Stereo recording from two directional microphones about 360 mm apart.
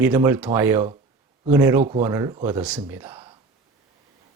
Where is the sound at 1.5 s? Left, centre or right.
Centre.